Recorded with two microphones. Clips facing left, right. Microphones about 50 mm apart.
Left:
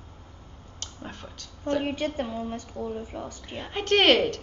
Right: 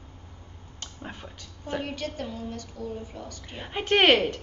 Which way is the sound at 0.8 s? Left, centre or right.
Centre.